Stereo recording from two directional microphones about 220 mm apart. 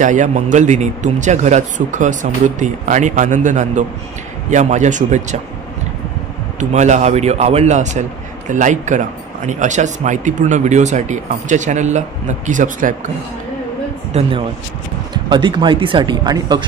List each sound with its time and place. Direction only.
0.0 s a man's voice: 35° right (ahead or behind)
6.6 s a man's voice: 30° right (ahead or behind)
14.1 s speech: 30° right (ahead or behind)